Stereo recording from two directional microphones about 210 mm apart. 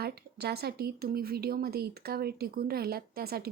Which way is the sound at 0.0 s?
50° right (ahead or behind).